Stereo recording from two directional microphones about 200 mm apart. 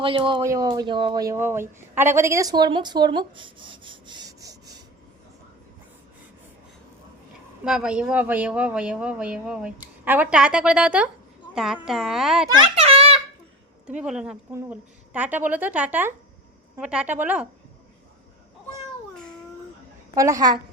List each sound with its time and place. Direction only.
0.0 s speech: 25° right (ahead or behind)
7.6 s a man's voice: 5° right (ahead or behind)
12.5 s a sound: 30° right (ahead or behind)
14.0 s a man's voice: 5° right (ahead or behind)
20.1 s a woman's voice: 15° right (ahead or behind)